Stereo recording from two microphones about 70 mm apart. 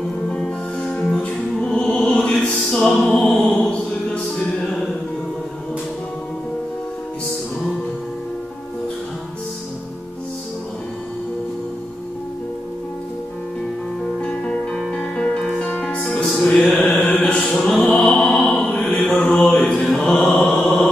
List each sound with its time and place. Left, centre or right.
1.2 s music: centre
14.2 s music: centre
16.5 s mantra: left
17.5 s music: centre
18.4 s mantra: centre
20.5 s mantra: centre